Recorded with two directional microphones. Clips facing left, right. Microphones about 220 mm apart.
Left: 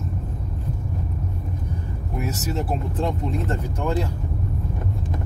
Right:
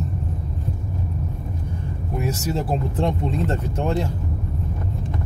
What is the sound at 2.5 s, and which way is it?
Speech, 25° right (ahead or behind).